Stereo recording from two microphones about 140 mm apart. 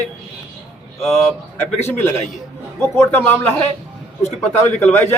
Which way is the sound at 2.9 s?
15° left (ahead or behind).